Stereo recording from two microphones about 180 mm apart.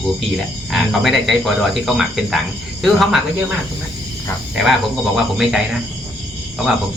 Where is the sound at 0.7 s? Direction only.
Centre (ahead or behind).